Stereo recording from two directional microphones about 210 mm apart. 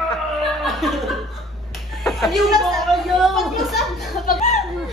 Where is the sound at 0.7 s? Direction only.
Centre (ahead or behind).